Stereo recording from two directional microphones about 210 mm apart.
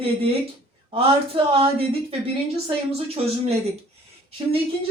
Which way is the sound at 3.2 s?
30° right (ahead or behind).